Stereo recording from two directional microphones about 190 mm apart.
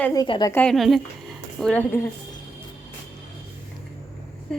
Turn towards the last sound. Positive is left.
turn(degrees=5)  # may be behind; listen again after turning